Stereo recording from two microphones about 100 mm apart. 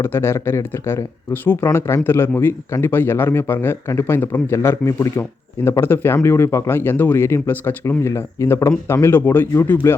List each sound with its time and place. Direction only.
0.0 s speech: 25° left (ahead or behind)